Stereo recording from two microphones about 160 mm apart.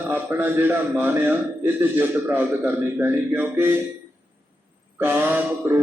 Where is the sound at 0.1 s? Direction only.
10° right (ahead or behind).